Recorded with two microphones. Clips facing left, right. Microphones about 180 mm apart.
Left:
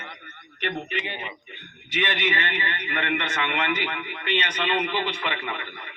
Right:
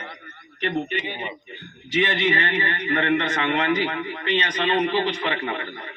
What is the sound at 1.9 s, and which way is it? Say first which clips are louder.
A man's voice: right 5 dB; 35° right (ahead or behind).